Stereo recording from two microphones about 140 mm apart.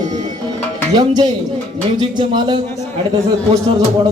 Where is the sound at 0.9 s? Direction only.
30° right (ahead or behind).